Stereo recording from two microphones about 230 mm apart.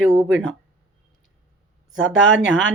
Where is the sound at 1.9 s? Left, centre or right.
Right.